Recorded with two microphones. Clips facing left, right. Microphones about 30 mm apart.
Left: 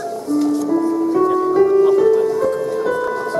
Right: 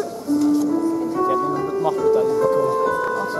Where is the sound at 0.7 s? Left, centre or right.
Left.